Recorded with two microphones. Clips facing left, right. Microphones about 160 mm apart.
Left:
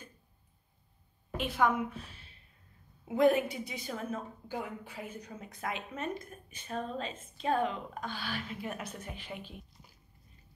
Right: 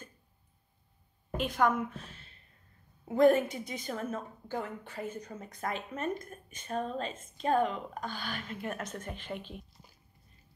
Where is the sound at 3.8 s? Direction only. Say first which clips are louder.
Right 2 dB; 5° left (ahead or behind).